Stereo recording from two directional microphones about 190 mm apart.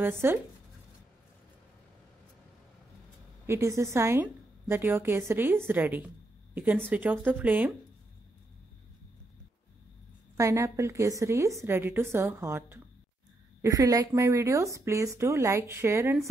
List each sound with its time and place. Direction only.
0.2 s speech: 10° right (ahead or behind)
3.4 s a woman's voice: 15° right (ahead or behind)
10.3 s speech: 15° right (ahead or behind)